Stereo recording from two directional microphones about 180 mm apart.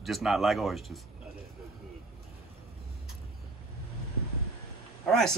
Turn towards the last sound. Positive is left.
turn(degrees=0)  # may be behind; listen again after turning